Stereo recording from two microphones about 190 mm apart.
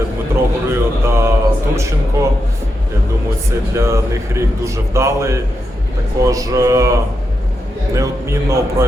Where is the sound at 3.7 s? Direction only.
15° right (ahead or behind).